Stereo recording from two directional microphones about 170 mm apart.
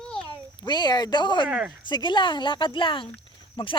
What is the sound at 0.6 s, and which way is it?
Speech, 25° left (ahead or behind).